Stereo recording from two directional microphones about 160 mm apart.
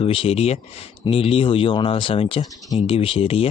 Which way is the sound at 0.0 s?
35° left (ahead or behind).